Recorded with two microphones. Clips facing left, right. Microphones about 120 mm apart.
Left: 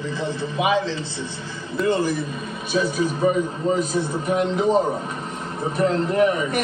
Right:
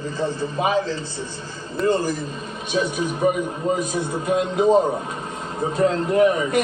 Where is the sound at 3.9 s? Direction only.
20° right (ahead or behind).